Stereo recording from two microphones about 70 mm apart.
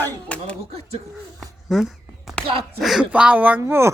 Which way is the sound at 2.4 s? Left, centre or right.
Centre.